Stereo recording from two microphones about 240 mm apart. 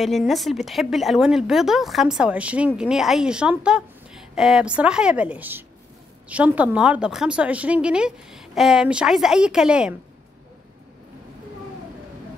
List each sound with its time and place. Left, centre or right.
0.0 s a woman's voice: centre